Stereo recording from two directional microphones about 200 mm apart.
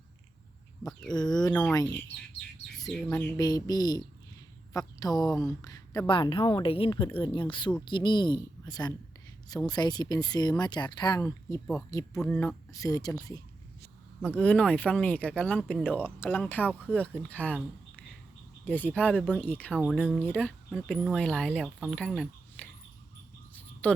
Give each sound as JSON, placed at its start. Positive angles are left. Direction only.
{"t": 1.1, "sound": "speech", "side_deg": 20}
{"t": 3.1, "sound": "speech", "side_deg": 20}
{"t": 14.3, "sound": "speech", "side_deg": 5}
{"t": 18.6, "sound": "speech", "side_deg": 10}
{"t": 20.1, "sound": "speech", "side_deg": 5}
{"t": 23.8, "sound": "speech", "side_deg": 5}